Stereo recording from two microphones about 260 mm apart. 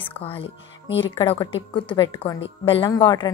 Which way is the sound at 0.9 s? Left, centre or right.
Left.